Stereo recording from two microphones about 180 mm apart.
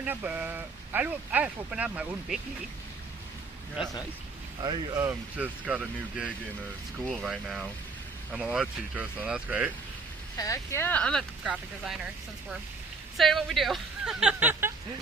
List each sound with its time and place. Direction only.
0.0 s speech: 10° right (ahead or behind)
4.6 s speech: 20° right (ahead or behind)
10.3 s speech: 20° left (ahead or behind); by 14.7 s 10° right (ahead or behind)